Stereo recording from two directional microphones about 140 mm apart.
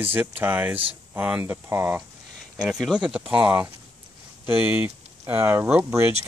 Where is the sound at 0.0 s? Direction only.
15° right (ahead or behind).